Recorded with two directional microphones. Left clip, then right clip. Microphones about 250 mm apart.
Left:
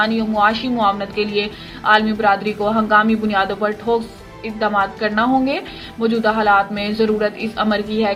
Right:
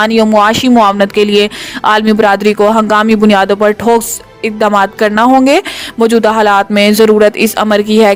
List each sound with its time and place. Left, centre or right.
0.0 s speech: right